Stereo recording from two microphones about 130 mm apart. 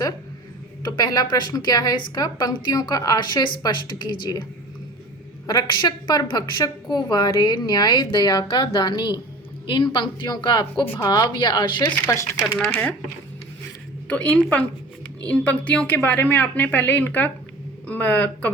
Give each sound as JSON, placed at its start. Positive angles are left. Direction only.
{"t": 0.9, "sound": "a woman's voice", "side_deg": 30}
{"t": 5.5, "sound": "a woman's voice", "side_deg": 35}
{"t": 14.1, "sound": "a woman's voice", "side_deg": 10}